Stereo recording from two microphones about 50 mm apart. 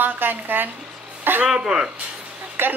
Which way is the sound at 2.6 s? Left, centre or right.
Right.